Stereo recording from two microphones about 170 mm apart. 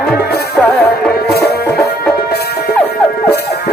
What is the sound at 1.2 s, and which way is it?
Music, 70° left (ahead or behind).